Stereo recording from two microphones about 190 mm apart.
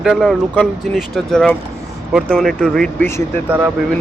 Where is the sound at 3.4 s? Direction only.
10° right (ahead or behind).